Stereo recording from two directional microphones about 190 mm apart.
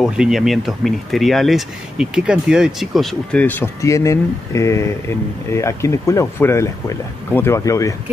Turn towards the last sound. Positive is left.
turn(degrees=15)  # may be behind; listen again after turning